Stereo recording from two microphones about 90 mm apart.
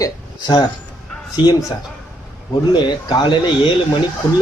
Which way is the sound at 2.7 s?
55° left (ahead or behind).